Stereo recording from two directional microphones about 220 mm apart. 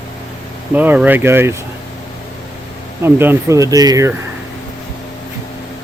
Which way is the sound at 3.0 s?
10° right (ahead or behind).